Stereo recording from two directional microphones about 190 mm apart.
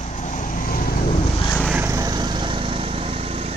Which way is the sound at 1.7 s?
10° right (ahead or behind).